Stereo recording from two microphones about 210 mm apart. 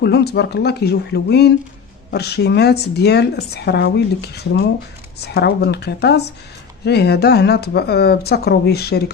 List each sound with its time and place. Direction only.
0.0 s a woman's voice: 50° left (ahead or behind)